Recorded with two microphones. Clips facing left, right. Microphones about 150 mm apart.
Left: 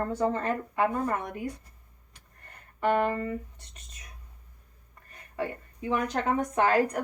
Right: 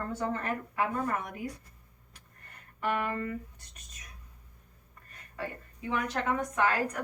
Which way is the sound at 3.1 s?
25° left (ahead or behind).